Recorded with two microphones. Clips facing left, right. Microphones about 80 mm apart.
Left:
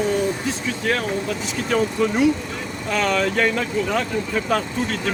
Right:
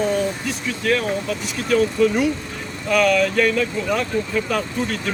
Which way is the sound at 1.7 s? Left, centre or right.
Left.